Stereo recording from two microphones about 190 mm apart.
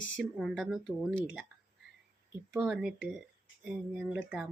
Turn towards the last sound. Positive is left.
turn(degrees=-5)  # may be behind; listen again after turning